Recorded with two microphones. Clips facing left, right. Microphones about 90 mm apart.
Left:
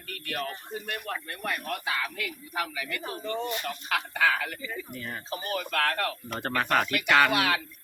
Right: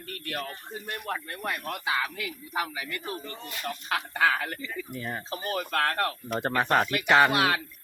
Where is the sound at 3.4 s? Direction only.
25° left (ahead or behind).